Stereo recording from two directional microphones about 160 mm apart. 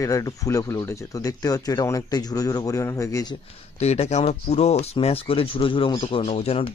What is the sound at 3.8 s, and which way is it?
Speech, 40° left (ahead or behind).